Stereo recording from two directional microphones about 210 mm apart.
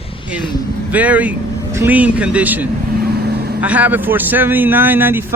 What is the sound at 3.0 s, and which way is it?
Vehicle, 50° right (ahead or behind).